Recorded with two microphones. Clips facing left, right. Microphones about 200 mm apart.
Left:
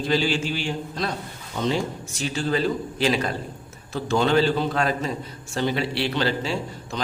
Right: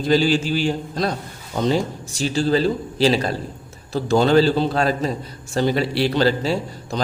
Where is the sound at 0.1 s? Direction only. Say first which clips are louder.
Right 7 dB; 40° right (ahead or behind).